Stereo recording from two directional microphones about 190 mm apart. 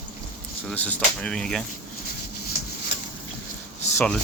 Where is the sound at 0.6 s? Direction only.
10° left (ahead or behind).